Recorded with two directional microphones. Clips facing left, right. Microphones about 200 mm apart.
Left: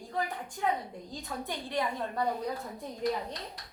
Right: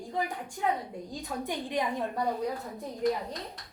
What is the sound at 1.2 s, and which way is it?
Speech, 15° right (ahead or behind).